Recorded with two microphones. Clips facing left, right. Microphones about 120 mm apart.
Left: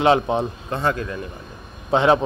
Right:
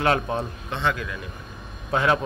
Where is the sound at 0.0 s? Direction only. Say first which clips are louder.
Left 6 dB; 20° left (ahead or behind).